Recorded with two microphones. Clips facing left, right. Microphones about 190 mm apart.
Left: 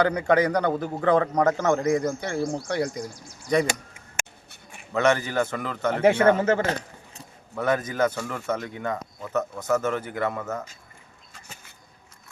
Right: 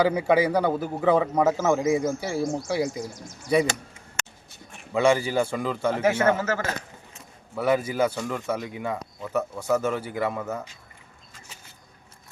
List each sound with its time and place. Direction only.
0.0 s a man's voice: 5° right (ahead or behind)
4.9 s speech: 10° right (ahead or behind)
5.9 s speech: 30° left (ahead or behind)
7.5 s speech: 10° right (ahead or behind)